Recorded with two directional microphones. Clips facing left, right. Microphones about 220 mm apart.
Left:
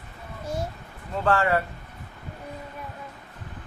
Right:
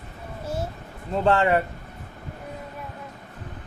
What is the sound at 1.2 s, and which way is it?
Speech, 20° right (ahead or behind).